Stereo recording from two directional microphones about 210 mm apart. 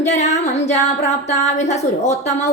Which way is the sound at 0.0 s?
35° left (ahead or behind).